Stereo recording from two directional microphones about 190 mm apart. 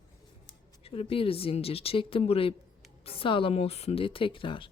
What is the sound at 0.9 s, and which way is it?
Speech, 30° left (ahead or behind).